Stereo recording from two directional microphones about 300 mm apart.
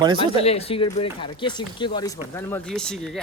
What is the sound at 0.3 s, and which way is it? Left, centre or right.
Speech, centre.